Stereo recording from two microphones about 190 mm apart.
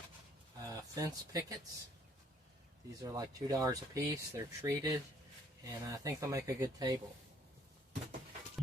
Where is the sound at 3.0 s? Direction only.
20° right (ahead or behind).